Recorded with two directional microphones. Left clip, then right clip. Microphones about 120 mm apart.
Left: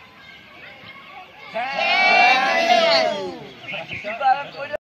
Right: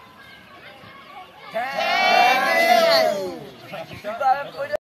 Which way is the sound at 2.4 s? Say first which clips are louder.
Even; 40° right (ahead or behind).